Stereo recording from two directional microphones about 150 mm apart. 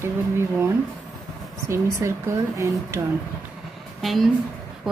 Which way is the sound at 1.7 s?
20° right (ahead or behind).